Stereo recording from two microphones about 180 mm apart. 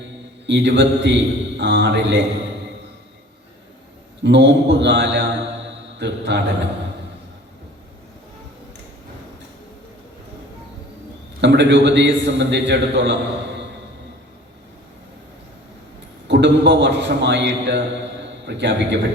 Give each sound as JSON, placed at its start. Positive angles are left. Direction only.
{"t": 0.4, "sound": "a man's voice", "side_deg": -75}
{"t": 4.2, "sound": "a man's voice", "side_deg": -75}
{"t": 11.3, "sound": "a man's voice", "side_deg": -75}
{"t": 16.2, "sound": "a man's voice", "side_deg": -75}